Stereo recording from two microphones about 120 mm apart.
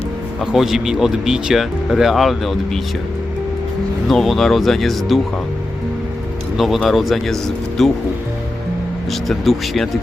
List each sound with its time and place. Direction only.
0.5 s speech: 5° right (ahead or behind)
4.1 s speech: centre (ahead or behind)
6.6 s speech: centre (ahead or behind)
9.2 s speech: centre (ahead or behind)